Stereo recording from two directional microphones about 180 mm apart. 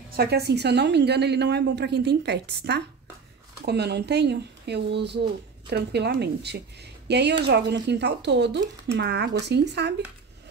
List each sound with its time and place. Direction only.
0.1 s a woman's voice: 60° right (ahead or behind)